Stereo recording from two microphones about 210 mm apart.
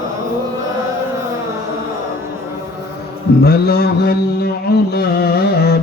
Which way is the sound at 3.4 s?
50° left (ahead or behind).